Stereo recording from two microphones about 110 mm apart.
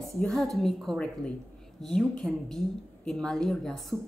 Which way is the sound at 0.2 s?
5° left (ahead or behind).